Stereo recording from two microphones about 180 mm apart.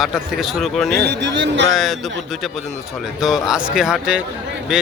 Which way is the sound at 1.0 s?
75° right (ahead or behind).